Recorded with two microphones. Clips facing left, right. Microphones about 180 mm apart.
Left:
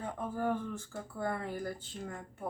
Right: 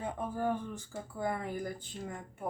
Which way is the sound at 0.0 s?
15° right (ahead or behind).